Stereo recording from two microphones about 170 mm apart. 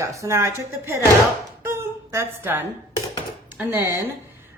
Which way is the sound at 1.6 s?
15° right (ahead or behind).